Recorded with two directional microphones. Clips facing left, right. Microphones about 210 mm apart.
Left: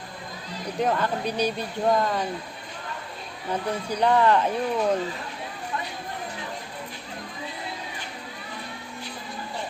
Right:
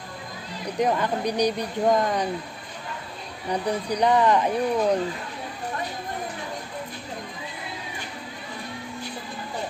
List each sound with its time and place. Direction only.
0.8 s speech: 15° right (ahead or behind)
3.5 s speech: 15° right (ahead or behind)